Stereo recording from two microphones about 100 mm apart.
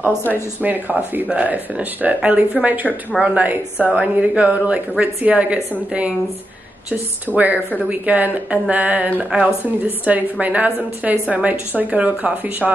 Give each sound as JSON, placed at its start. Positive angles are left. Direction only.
{"t": 0.6, "sound": "a woman's voice", "side_deg": -20}
{"t": 7.3, "sound": "a woman's voice", "side_deg": 5}
{"t": 8.0, "sound": "a woman's voice", "side_deg": -15}